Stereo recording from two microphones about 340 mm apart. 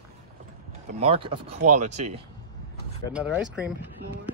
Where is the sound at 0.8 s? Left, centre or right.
Centre.